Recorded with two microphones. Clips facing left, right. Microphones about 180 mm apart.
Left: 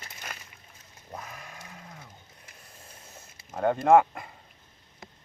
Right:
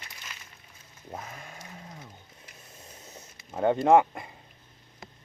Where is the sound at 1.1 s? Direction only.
25° right (ahead or behind).